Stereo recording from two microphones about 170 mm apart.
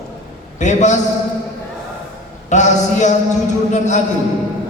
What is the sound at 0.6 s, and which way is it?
Speech, 45° left (ahead or behind).